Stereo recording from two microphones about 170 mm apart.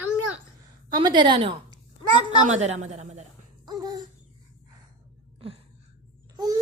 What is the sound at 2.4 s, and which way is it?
Speech, 45° right (ahead or behind).